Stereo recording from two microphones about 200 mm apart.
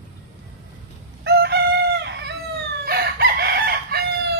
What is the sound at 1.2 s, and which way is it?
Chicken, 55° right (ahead or behind).